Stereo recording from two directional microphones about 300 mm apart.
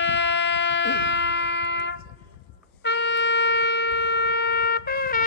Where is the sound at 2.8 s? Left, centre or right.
Left.